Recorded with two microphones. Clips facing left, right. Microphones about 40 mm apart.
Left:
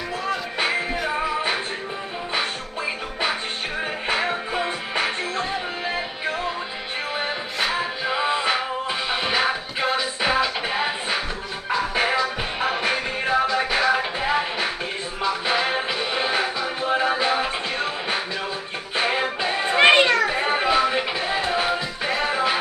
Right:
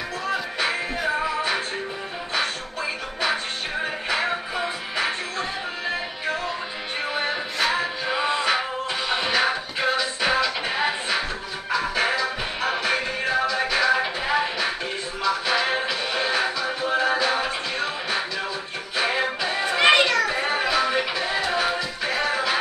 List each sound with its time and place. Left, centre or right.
0.7 s music: centre
2.3 s music: centre
4.6 s music: left
7.2 s music: centre
11.7 s music: left
13.9 s music: centre